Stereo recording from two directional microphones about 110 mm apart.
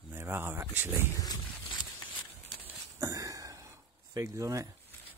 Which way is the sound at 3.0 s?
30° right (ahead or behind).